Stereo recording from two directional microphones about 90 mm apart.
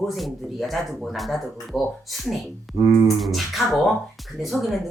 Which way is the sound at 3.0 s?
Centre (ahead or behind).